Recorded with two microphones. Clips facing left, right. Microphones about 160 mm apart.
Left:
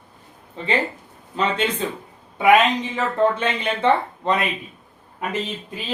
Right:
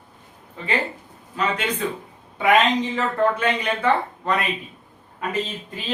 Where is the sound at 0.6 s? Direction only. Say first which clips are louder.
Left 4 dB; 25° left (ahead or behind).